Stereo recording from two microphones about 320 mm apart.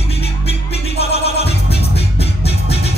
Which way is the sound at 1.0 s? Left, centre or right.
Centre.